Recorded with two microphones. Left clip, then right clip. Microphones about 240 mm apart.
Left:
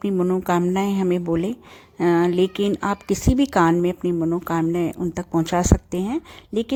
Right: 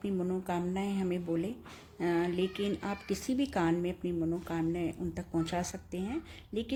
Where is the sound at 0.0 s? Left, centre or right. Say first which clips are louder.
Left 13 dB; left.